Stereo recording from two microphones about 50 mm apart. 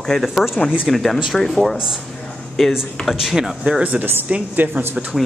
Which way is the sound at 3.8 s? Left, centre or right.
Right.